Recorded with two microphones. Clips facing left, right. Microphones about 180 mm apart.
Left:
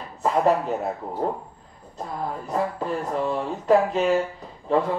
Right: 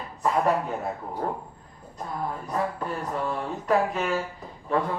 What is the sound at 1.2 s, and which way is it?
Speech, 25° left (ahead or behind).